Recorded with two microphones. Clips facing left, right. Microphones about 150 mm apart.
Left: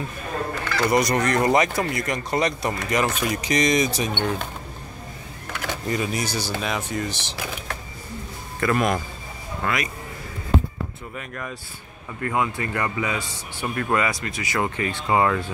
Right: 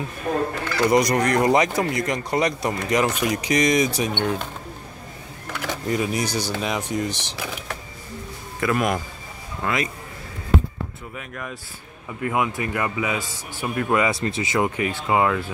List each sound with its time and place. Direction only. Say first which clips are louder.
0.7 s speech: right 2 dB; 15° right (ahead or behind)
5.6 s speech: right 2 dB; 5° right (ahead or behind)
8.5 s speech: even; 10° right (ahead or behind)
11.1 s speech: left 1 dB; centre (ahead or behind)
12.2 s speech: right 1 dB; 15° right (ahead or behind)
14.1 s speech: right 4 dB; 30° right (ahead or behind)
14.8 s speech: even; 10° right (ahead or behind)